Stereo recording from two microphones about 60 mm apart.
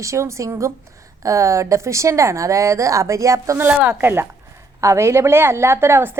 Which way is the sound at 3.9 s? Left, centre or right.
Right.